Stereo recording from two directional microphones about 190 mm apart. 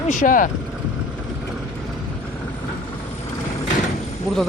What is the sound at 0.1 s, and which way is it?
Speech, 45° left (ahead or behind).